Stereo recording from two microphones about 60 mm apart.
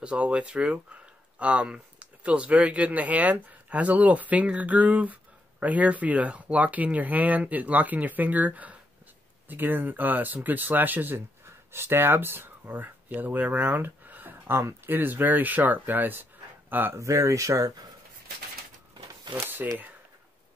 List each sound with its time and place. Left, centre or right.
0.0 s speech: centre
16.9 s speech: right
19.4 s speech: right